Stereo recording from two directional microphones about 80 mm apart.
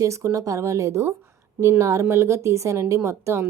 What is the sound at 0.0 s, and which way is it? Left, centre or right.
Speech, right.